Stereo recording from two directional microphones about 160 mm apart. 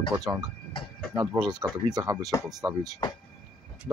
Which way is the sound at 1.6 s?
25° right (ahead or behind).